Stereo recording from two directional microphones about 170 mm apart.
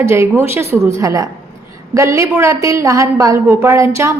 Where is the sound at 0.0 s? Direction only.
15° right (ahead or behind).